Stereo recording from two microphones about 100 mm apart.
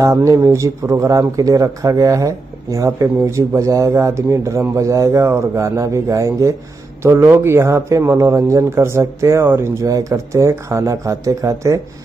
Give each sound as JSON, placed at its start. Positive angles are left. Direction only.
{"t": 0.0, "sound": "a man's voice", "side_deg": -35}